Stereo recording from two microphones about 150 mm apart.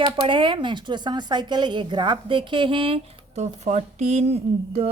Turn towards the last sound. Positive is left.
turn(degrees=-45)  # may be behind; listen again after turning